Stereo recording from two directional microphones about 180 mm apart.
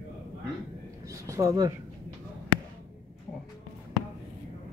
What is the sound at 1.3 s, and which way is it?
Speech, 15° right (ahead or behind).